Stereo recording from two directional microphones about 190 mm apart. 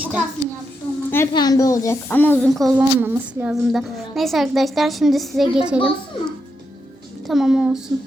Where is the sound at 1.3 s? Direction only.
20° left (ahead or behind); by 5.6 s centre (ahead or behind).